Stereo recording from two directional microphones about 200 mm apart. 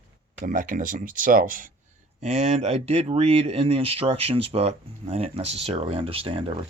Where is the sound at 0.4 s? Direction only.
40° right (ahead or behind).